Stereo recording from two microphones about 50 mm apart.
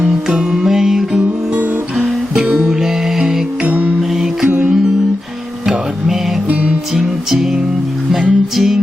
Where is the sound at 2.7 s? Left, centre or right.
Centre.